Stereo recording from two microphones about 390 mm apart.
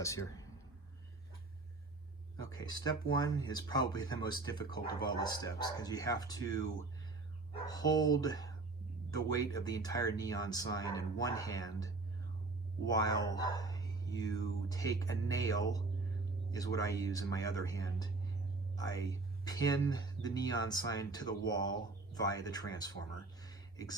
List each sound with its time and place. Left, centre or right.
0.0 s speech: centre
2.5 s speech: centre
7.7 s speech: centre
23.4 s a sound: centre